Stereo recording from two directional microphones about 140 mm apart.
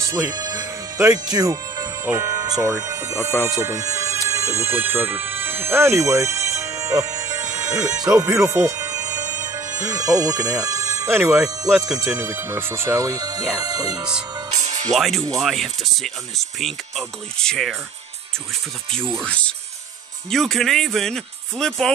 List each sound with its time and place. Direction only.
0.0 s music: 20° right (ahead or behind)
2.0 s speech: 25° right (ahead or behind)
6.5 s music: 20° right (ahead or behind)
12.0 s speech: 15° right (ahead or behind)
14.5 s music: 60° right (ahead or behind)
14.9 s speech: centre (ahead or behind)
19.2 s speech: 10° left (ahead or behind)